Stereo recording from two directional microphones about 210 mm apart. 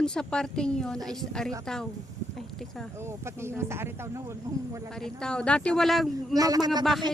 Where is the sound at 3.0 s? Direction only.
10° right (ahead or behind).